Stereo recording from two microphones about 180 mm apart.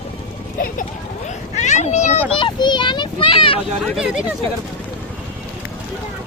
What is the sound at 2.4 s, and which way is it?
Children playing, 25° left (ahead or behind).